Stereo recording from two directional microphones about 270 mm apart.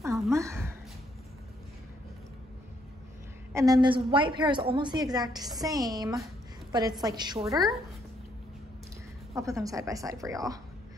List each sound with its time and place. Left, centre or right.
0.3 s a sound: centre
3.5 s a woman's voice: centre
7.5 s speech: centre
9.3 s a woman's voice: centre